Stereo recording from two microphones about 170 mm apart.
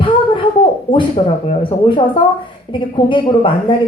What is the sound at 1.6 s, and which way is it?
A woman's voice, 30° left (ahead or behind).